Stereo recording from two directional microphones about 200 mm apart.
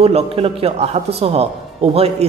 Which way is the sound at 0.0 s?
30° right (ahead or behind).